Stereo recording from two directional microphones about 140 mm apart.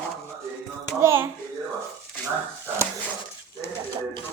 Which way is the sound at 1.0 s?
20° right (ahead or behind).